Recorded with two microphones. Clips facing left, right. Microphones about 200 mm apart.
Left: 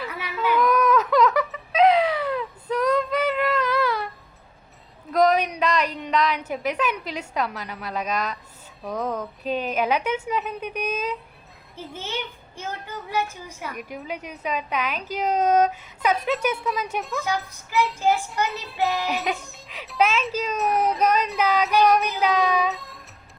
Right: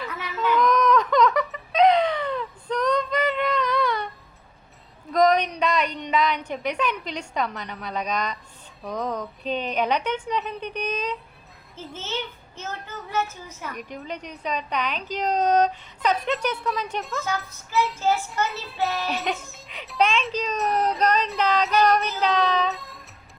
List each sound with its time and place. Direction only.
0.0 s a sound: 10° left (ahead or behind)
5.1 s a woman's voice: 5° left (ahead or behind)
17.2 s a child's voice: 15° left (ahead or behind)
19.1 s a woman's voice: centre (ahead or behind)
22.7 s music: centre (ahead or behind)